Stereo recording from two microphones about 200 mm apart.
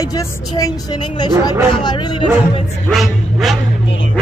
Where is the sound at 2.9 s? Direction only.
Centre (ahead or behind).